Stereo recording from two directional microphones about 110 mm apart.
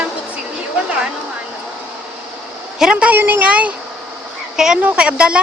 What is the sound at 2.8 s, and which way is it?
A woman's voice, 10° right (ahead or behind).